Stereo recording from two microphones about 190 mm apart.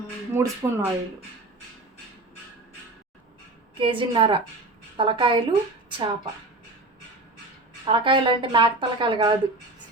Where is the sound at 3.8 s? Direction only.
25° right (ahead or behind).